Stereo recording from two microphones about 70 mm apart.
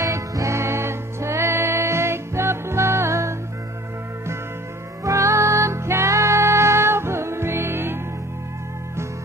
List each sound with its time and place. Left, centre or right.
0.0 s music: right
5.0 s music: right